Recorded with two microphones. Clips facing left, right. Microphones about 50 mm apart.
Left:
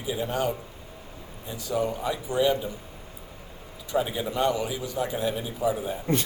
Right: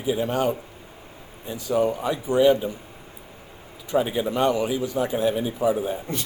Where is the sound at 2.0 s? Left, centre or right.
Right.